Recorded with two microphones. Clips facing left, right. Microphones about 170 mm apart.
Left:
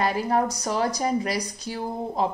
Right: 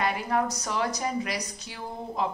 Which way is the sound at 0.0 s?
35° left (ahead or behind).